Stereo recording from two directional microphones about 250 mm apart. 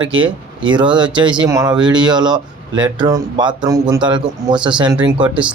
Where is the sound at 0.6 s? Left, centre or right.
Centre.